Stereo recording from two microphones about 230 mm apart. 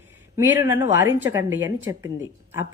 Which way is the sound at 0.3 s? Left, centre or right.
Centre.